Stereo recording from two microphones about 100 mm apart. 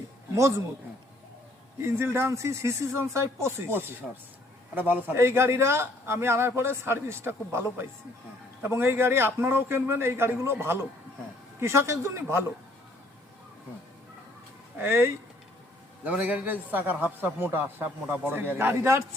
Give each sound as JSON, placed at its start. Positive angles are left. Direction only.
{"t": 0.3, "sound": "a man's voice", "side_deg": -30}
{"t": 1.8, "sound": "a man's voice", "side_deg": -25}
{"t": 8.6, "sound": "a man's voice", "side_deg": -25}
{"t": 14.8, "sound": "a man's voice", "side_deg": -20}